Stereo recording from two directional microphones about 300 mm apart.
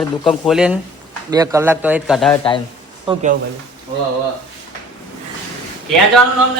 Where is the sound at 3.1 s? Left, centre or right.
Right.